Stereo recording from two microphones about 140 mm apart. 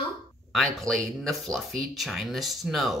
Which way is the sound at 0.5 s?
5° left (ahead or behind).